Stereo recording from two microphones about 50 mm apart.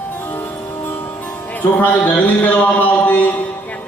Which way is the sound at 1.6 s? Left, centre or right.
Left.